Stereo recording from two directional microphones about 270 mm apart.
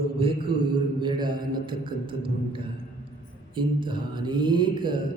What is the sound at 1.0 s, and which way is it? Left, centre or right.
A man's voice, centre.